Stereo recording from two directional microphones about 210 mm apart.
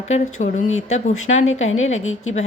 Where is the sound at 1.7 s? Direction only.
70° left (ahead or behind).